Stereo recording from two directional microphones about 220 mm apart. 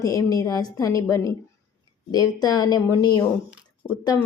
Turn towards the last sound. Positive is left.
turn(degrees=20)  # may be behind; listen again after turning